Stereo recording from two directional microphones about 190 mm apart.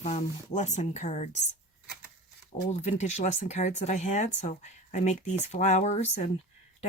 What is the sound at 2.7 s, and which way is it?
Speech, 35° left (ahead or behind).